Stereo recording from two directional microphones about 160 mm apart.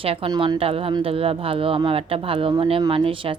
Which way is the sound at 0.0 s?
35° right (ahead or behind).